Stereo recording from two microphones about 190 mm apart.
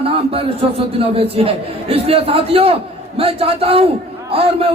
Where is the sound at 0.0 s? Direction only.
30° right (ahead or behind).